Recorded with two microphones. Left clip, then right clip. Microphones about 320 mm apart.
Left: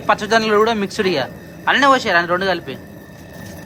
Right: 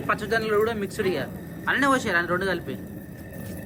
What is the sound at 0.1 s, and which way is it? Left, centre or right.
A man's voice, centre.